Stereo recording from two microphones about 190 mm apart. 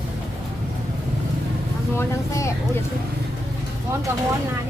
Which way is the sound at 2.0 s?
15° left (ahead or behind).